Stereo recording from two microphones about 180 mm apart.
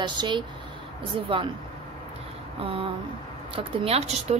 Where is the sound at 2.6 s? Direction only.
30° right (ahead or behind).